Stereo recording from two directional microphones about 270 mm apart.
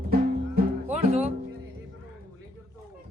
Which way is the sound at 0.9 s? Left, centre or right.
Right.